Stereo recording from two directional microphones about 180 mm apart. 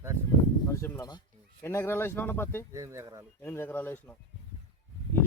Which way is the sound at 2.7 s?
15° right (ahead or behind).